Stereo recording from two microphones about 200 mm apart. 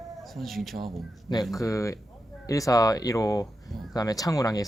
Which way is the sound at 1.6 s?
15° left (ahead or behind).